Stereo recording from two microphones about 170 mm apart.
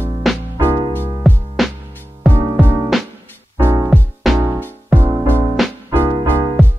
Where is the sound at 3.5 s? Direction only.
15° right (ahead or behind).